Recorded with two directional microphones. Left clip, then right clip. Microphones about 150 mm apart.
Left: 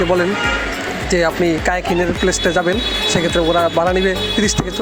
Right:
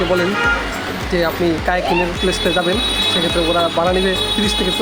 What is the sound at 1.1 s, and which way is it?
Speech, 45° left (ahead or behind).